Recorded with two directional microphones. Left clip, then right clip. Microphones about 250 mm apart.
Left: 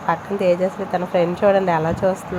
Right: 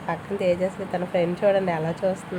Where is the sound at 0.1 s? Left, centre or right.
Centre.